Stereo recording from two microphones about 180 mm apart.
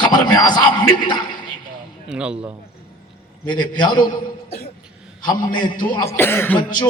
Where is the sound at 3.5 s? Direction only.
25° left (ahead or behind).